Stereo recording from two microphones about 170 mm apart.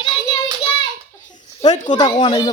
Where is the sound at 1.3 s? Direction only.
45° left (ahead or behind).